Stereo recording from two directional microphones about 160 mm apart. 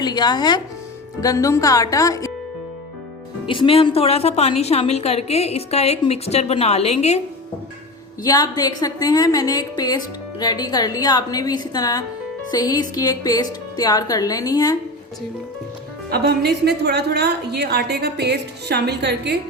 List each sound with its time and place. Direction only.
0.0 s speech: 25° left (ahead or behind)
3.4 s a woman's voice: 30° left (ahead or behind)
8.2 s speech: 25° left (ahead or behind)
16.0 s a woman's voice: 80° right